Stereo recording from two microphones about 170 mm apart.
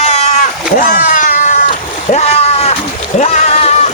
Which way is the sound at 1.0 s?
50° left (ahead or behind).